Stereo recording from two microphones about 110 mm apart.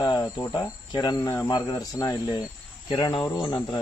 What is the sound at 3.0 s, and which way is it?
Speech, 45° left (ahead or behind).